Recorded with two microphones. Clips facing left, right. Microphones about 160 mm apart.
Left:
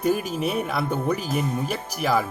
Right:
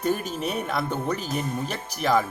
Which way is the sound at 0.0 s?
5° left (ahead or behind).